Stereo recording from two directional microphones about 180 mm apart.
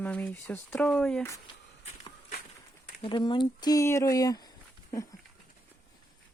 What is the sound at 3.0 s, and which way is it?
Speech, 25° left (ahead or behind).